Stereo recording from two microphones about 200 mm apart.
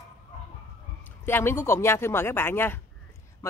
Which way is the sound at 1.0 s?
10° left (ahead or behind).